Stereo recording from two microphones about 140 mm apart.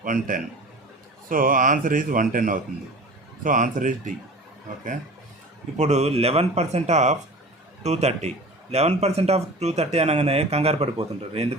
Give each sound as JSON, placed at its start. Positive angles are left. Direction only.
{"t": 0.0, "sound": "speech", "side_deg": -70}
{"t": 5.7, "sound": "speech", "side_deg": -55}